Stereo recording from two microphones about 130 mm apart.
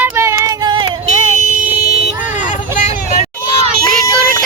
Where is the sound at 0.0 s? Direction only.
20° right (ahead or behind).